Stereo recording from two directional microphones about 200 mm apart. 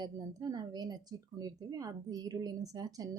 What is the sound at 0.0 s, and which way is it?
A woman's voice, 20° right (ahead or behind).